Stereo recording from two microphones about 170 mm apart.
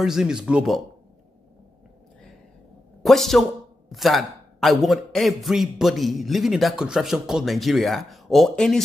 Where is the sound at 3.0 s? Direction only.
Centre (ahead or behind).